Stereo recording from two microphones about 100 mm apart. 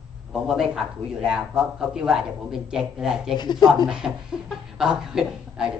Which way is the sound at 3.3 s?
45° left (ahead or behind).